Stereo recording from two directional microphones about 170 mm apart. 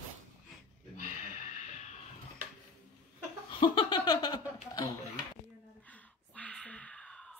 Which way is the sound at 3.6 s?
25° left (ahead or behind).